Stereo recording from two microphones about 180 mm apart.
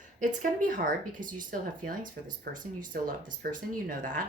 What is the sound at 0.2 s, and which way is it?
Speech, 45° right (ahead or behind).